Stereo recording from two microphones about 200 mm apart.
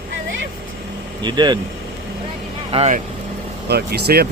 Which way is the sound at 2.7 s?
30° right (ahead or behind).